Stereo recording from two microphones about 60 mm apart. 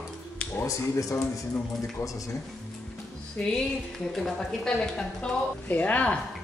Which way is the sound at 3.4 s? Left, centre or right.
Centre.